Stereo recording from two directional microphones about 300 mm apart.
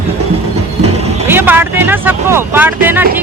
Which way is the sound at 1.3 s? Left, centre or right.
Centre.